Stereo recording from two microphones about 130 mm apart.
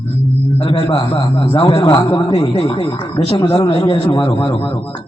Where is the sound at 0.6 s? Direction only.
40° left (ahead or behind).